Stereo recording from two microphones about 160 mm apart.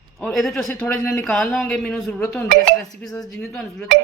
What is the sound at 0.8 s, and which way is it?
Speech, 15° left (ahead or behind).